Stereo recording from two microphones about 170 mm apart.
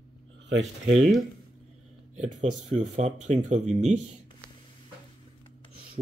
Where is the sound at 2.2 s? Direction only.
45° right (ahead or behind).